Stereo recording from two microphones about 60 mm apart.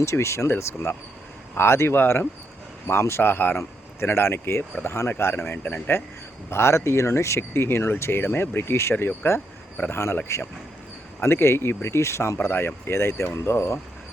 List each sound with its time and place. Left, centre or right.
0.0 s speech: left
6.5 s speech: left
10.2 s speech: left